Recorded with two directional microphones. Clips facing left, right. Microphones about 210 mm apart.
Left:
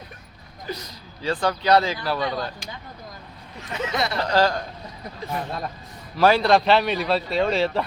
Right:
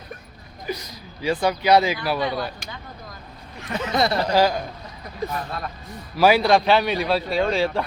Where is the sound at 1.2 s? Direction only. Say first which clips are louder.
Right 2 dB; 10° right (ahead or behind).